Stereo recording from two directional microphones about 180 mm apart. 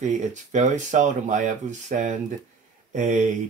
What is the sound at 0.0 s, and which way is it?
Speech, 40° right (ahead or behind).